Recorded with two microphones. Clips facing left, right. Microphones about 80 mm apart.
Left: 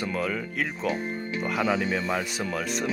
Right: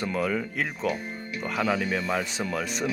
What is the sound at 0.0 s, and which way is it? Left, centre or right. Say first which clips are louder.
Speech: right 2 dB; centre.